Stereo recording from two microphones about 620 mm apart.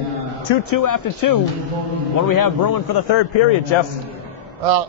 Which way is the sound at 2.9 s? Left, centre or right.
Left.